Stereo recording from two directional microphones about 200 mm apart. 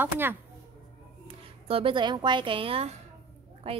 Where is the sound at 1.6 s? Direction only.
25° right (ahead or behind).